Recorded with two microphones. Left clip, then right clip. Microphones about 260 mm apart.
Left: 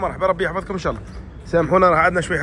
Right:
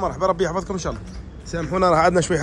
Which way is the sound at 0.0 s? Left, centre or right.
Centre.